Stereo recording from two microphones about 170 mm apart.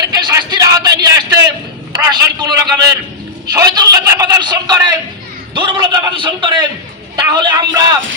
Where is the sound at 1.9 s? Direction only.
25° right (ahead or behind).